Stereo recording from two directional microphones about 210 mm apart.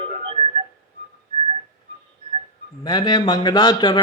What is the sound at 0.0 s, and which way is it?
Music, 25° right (ahead or behind).